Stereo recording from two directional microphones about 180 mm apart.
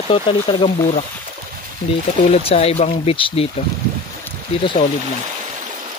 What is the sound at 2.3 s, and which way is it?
Speech, 35° left (ahead or behind).